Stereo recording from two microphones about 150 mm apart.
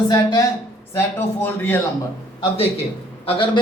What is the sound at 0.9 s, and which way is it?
Speech, 15° left (ahead or behind).